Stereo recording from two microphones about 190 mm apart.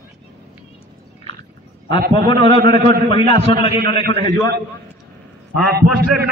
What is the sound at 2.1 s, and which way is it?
A man's voice, 30° left (ahead or behind).